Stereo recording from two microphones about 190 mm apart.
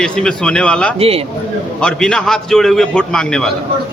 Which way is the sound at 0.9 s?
30° right (ahead or behind).